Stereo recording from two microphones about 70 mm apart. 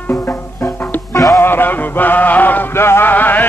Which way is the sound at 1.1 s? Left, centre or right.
Left.